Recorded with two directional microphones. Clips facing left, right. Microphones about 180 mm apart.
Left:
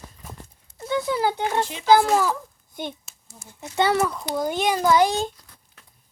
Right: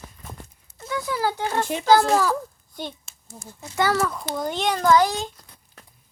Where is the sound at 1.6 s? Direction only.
50° right (ahead or behind).